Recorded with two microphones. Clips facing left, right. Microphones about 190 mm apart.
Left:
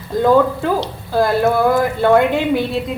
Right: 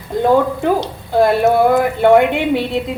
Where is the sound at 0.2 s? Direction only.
20° right (ahead or behind).